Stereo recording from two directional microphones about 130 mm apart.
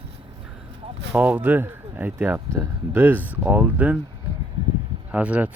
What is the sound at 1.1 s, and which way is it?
Speech, 15° right (ahead or behind).